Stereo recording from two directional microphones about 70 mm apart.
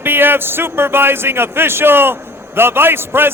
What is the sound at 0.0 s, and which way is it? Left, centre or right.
A man's voice, right.